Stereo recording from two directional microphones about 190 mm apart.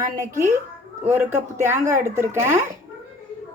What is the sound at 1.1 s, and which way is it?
A woman's voice, 10° right (ahead or behind).